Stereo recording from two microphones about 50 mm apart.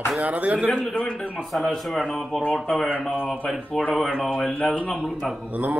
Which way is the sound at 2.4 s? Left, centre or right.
Left.